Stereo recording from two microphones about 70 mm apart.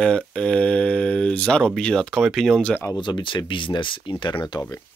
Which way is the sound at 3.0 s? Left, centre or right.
Left.